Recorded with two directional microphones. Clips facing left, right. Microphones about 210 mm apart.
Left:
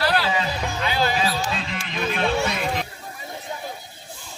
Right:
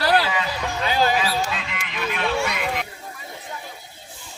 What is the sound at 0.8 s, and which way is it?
Music, 40° right (ahead or behind).